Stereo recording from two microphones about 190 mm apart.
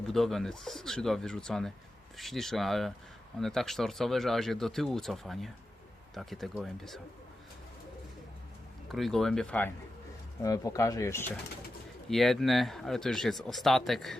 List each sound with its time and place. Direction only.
0.1 s speech: centre (ahead or behind)
8.9 s speech: centre (ahead or behind)
12.0 s speech: centre (ahead or behind)